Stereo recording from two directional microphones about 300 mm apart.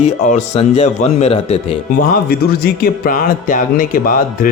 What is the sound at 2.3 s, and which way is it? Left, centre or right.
A man's voice, left.